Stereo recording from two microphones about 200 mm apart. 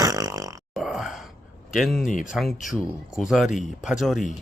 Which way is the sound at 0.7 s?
Centre (ahead or behind).